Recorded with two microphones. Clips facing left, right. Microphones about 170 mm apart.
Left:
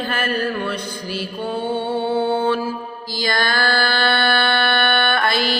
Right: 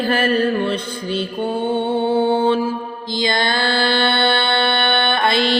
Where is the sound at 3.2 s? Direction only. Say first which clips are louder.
Right 1 dB; 25° right (ahead or behind).